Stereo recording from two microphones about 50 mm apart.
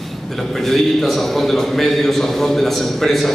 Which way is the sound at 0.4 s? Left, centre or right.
Centre.